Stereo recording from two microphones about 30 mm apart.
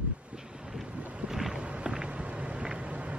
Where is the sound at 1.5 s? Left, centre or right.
Right.